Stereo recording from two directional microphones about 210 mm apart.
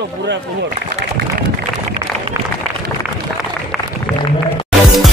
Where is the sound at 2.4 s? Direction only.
10° right (ahead or behind).